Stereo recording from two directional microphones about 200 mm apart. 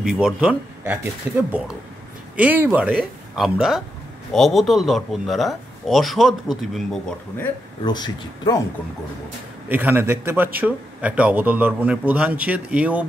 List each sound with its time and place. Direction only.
0.0 s speech: 5° right (ahead or behind)
2.3 s speech: 10° right (ahead or behind)
7.8 s a man's voice: 20° left (ahead or behind)
9.7 s a man's voice: 10° right (ahead or behind)